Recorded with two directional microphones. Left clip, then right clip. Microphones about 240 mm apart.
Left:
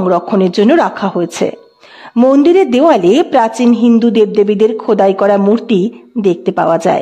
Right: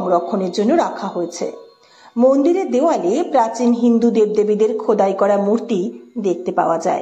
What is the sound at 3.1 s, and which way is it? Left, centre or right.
Speech, left.